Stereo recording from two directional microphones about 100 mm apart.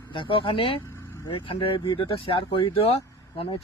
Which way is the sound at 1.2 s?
60° left (ahead or behind).